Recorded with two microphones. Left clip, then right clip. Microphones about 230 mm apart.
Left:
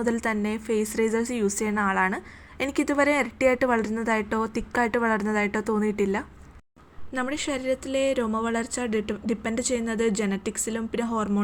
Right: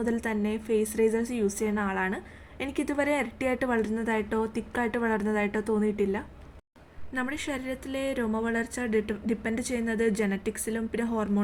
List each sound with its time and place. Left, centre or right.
0.0 s a woman's voice: centre